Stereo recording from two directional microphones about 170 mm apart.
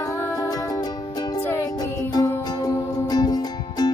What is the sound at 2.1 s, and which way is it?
Music, 20° left (ahead or behind).